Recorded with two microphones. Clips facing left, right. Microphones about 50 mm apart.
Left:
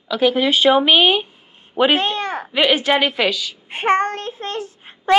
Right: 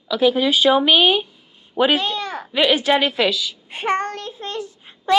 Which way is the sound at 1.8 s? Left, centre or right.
Left.